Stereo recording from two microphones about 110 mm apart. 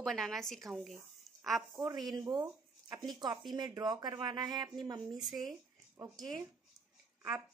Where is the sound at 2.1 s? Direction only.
40° right (ahead or behind).